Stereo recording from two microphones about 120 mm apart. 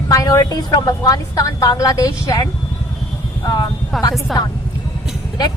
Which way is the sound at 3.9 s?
Centre (ahead or behind).